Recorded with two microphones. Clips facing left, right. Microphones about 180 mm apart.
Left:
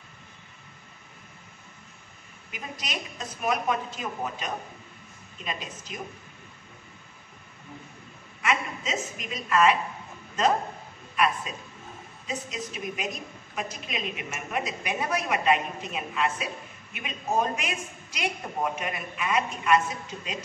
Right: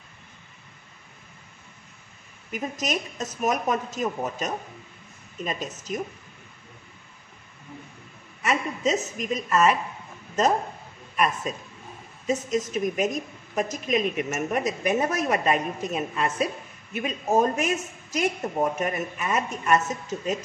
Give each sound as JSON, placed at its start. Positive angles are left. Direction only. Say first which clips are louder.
{"t": 2.5, "sound": "a woman's voice", "louder": "right 8 dB", "side_deg": -45}
{"t": 8.4, "sound": "a woman's voice", "louder": "right 2 dB", "side_deg": -40}
{"t": 11.1, "sound": "a woman's voice", "louder": "right 1 dB", "side_deg": -45}